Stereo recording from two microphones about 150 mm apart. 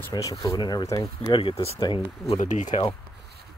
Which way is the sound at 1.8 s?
35° left (ahead or behind).